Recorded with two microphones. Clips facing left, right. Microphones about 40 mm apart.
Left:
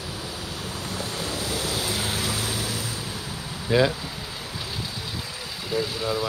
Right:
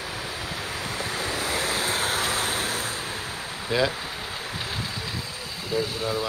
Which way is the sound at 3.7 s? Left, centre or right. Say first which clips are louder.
Left 3 dB; centre.